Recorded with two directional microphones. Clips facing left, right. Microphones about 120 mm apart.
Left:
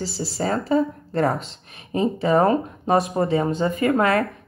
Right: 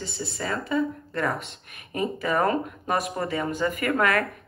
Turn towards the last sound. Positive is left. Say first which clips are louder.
# left 5 dB
turn(degrees=30)  # may be behind; listen again after turning